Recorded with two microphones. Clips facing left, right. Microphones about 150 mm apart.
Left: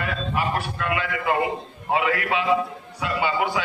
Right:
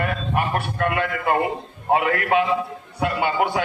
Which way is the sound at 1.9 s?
50° right (ahead or behind).